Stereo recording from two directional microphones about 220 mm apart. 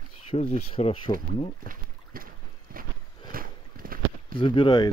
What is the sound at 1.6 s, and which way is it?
Boat, 40° right (ahead or behind).